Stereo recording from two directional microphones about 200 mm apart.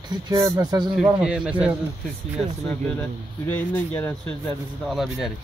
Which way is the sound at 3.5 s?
10° left (ahead or behind).